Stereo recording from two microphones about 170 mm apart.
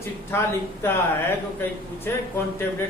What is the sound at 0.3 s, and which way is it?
Speech, 15° left (ahead or behind).